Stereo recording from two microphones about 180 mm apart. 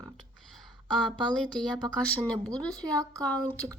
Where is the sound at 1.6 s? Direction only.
5° left (ahead or behind).